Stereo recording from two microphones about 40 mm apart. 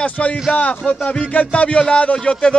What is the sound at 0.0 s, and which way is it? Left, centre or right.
A man's voice, left.